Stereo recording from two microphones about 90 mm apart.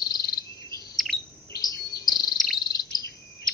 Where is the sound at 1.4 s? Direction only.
40° left (ahead or behind).